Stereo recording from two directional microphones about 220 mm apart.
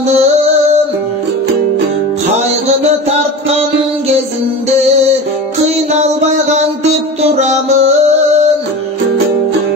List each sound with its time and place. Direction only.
0.1 s music: 30° right (ahead or behind)
5.9 s music: 30° right (ahead or behind)